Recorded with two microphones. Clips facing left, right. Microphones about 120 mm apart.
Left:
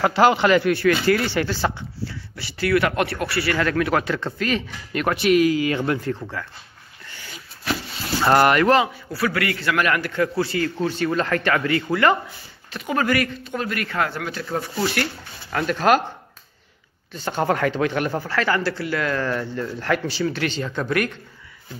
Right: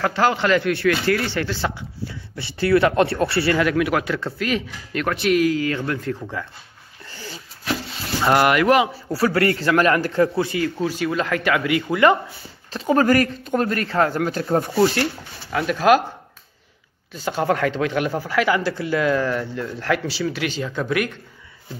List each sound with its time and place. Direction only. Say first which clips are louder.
0.0 s a man's voice: left 3 dB; 15° left (ahead or behind)
2.0 s speech: right 2 dB; 25° right (ahead or behind)
3.5 s speech: right 1 dB; 10° right (ahead or behind)
5.7 s speech: left 2 dB; 20° left (ahead or behind)
6.4 s speech: right 2 dB; 20° right (ahead or behind)
7.2 s a sound: right 6 dB; 35° right (ahead or behind)
8.2 s speech: left 1 dB; 5° right (ahead or behind)
9.1 s speech: right 6 dB; 35° right (ahead or behind)
10.3 s speech: right 1 dB; 15° right (ahead or behind)
12.7 s speech: right 5 dB; 35° right (ahead or behind)
15.5 s speech: right 2 dB; 5° right (ahead or behind)
17.1 s speech: right 1 dB; 5° right (ahead or behind)